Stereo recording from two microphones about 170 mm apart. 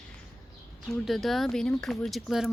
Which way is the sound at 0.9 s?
Centre (ahead or behind).